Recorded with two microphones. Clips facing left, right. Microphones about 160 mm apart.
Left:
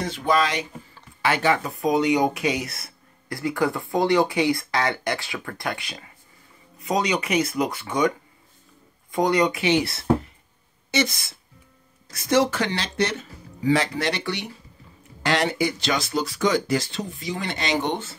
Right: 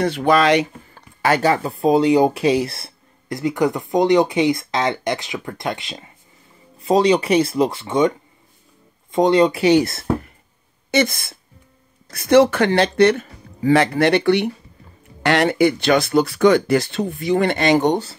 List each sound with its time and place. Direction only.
0.0 s speech: 65° right (ahead or behind)
1.2 s speech: 40° right (ahead or behind)
9.1 s speech: 25° right (ahead or behind); by 10.3 s 50° right (ahead or behind)
10.9 s a sound: 55° right (ahead or behind)
12.1 s speech: 60° right (ahead or behind); by 18.1 s 40° right (ahead or behind)